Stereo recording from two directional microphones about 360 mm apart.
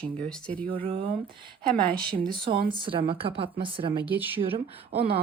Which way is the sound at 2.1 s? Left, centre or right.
Centre.